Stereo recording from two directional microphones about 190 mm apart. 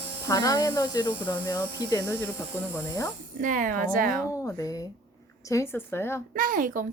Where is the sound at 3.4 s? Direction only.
45° right (ahead or behind).